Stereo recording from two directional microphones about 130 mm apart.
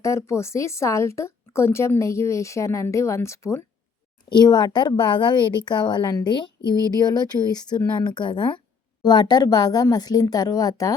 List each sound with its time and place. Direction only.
0.0 s speech: 20° left (ahead or behind)
4.3 s speech: 35° left (ahead or behind)